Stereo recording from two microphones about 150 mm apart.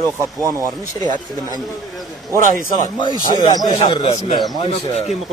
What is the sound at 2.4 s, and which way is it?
Speech, 60° right (ahead or behind).